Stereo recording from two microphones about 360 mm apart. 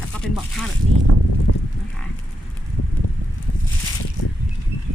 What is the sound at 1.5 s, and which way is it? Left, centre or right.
Livestock, left.